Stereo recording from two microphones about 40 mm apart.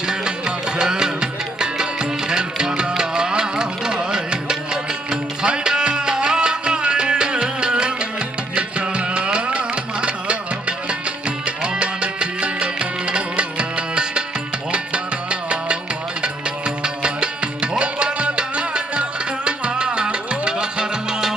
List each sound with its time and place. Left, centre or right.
0.0 s music: centre